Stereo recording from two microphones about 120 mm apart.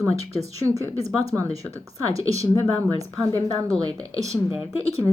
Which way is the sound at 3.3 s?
30° right (ahead or behind).